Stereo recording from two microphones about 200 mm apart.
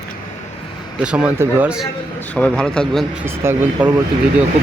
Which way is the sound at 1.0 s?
5° right (ahead or behind).